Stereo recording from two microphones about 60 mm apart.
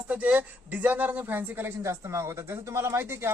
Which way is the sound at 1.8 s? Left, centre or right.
Right.